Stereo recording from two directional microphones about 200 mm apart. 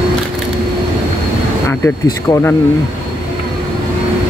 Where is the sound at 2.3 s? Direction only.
15° left (ahead or behind).